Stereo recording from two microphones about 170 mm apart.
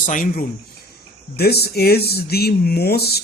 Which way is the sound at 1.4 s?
70° left (ahead or behind).